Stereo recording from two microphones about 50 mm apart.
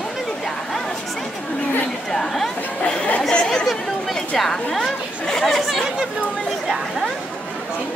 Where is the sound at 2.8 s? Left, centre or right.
Left; by 5.6 s centre.